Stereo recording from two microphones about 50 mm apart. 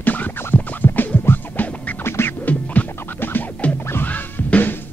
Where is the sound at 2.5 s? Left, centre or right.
Left.